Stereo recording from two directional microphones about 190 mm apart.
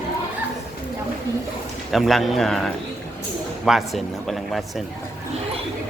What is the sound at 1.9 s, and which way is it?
A man's voice, centre (ahead or behind).